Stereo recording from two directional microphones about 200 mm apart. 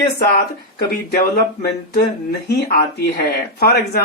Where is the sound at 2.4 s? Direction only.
50° left (ahead or behind).